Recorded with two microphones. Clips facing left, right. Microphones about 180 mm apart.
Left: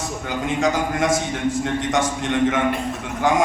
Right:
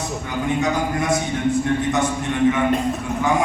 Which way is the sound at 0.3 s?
90° left.